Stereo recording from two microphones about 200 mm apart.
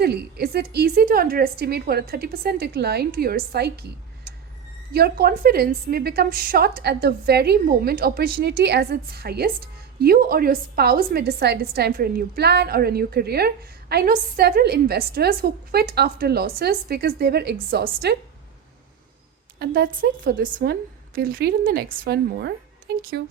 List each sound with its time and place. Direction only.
0.0 s a woman's voice: 55° right (ahead or behind)
4.9 s a woman's voice: 50° right (ahead or behind)
19.5 s a woman's voice: 50° right (ahead or behind)